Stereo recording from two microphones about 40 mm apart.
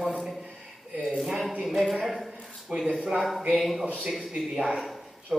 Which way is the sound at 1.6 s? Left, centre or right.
Centre.